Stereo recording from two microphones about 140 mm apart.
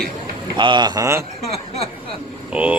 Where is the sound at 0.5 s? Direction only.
35° right (ahead or behind).